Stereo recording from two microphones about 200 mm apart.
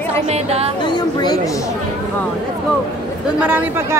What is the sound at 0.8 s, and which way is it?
Speech, 20° left (ahead or behind).